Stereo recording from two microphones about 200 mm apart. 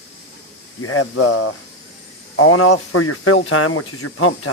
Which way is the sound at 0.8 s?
90° left.